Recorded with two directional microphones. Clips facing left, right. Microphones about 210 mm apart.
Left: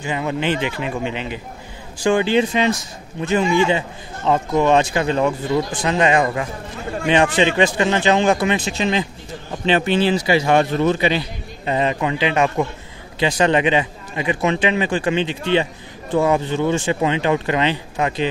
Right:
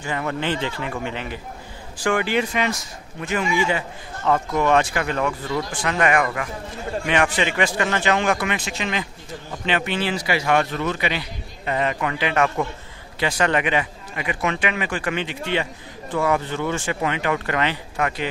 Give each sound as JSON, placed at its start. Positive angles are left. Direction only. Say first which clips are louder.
{"t": 0.0, "sound": "a man's voice", "louder": "left 3 dB", "side_deg": 20}